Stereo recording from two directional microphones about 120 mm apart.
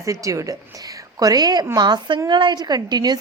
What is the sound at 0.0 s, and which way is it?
A woman's voice, 25° right (ahead or behind).